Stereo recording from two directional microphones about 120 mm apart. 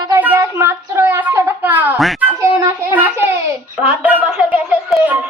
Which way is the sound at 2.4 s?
25° right (ahead or behind).